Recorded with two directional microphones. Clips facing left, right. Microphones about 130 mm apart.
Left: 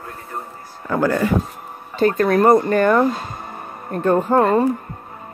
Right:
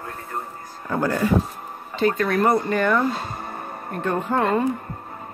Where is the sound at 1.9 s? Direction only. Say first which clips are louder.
Left 5 dB; 45° left (ahead or behind).